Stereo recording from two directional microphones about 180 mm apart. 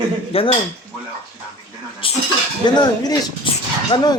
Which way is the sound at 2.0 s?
30° left (ahead or behind).